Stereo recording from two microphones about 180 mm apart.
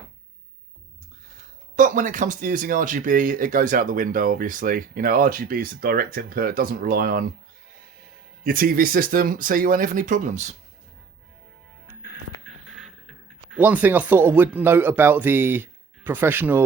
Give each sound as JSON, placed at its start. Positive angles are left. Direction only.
{"t": 1.7, "sound": "speech", "side_deg": -45}
{"t": 8.4, "sound": "speech", "side_deg": -55}
{"t": 12.0, "sound": "a sound", "side_deg": -5}